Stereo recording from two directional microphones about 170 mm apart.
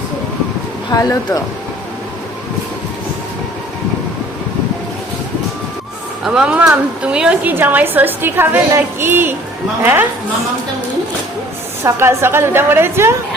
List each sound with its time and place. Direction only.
0.9 s speech: 20° left (ahead or behind)
6.2 s a woman's voice: 5° right (ahead or behind)
11.8 s a woman's voice: 15° right (ahead or behind)